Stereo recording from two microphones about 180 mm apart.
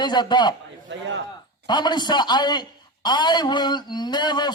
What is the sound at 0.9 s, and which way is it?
Speech, 90° right.